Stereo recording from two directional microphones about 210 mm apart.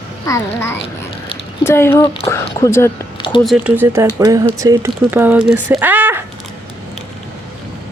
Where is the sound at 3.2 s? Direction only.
25° left (ahead or behind).